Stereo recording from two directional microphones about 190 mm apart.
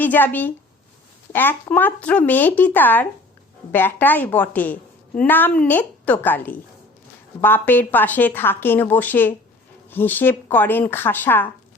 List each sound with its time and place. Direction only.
0.0 s a woman's voice: 10° left (ahead or behind)